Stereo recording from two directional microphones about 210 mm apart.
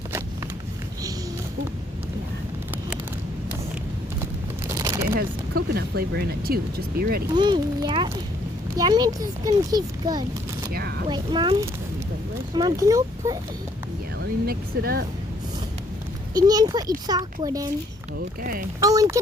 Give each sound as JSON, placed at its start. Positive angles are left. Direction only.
{"t": 4.8, "sound": "a sound", "side_deg": -15}
{"t": 5.1, "sound": "speech", "side_deg": -45}
{"t": 7.3, "sound": "speech", "side_deg": -20}
{"t": 10.7, "sound": "speech", "side_deg": -45}
{"t": 11.1, "sound": "speech", "side_deg": -20}
{"t": 14.2, "sound": "speech", "side_deg": -45}
{"t": 16.3, "sound": "a child's voice", "side_deg": -20}
{"t": 18.8, "sound": "a child's voice", "side_deg": -15}